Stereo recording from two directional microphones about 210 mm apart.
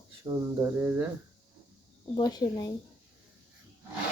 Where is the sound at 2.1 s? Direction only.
20° left (ahead or behind).